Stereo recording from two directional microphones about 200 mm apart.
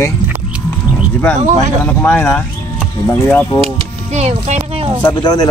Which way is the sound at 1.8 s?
10° left (ahead or behind).